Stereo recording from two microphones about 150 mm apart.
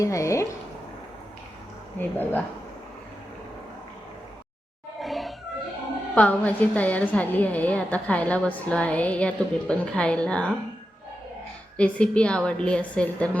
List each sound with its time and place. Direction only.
0.0 s speech: 20° left (ahead or behind)
2.0 s a woman's voice: 15° left (ahead or behind)
4.9 s music: centre (ahead or behind)
6.1 s a woman's voice: 10° left (ahead or behind)
11.8 s a woman's voice: 5° left (ahead or behind)